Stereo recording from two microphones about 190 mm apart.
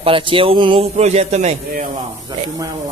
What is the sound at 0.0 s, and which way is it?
A man's voice, 25° right (ahead or behind).